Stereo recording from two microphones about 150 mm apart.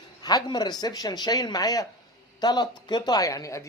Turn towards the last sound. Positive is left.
turn(degrees=20)  # may be behind; listen again after turning